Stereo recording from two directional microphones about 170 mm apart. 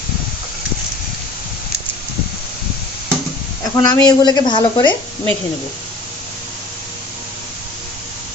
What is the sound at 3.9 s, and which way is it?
Speech, 25° left (ahead or behind).